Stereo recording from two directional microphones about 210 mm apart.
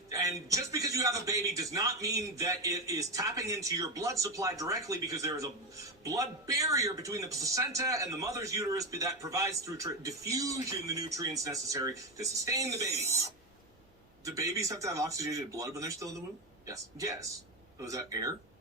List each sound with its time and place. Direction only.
0.1 s a man's voice: 15° right (ahead or behind)